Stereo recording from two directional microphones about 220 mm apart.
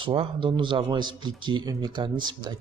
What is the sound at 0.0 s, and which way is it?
A man's voice, 25° right (ahead or behind).